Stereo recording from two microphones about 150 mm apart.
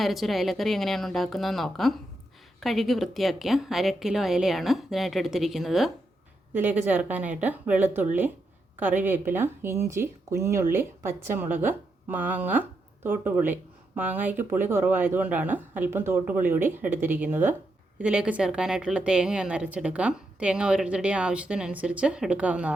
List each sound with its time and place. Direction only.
0.0 s a woman's voice: centre (ahead or behind)
6.5 s speech: 10° right (ahead or behind)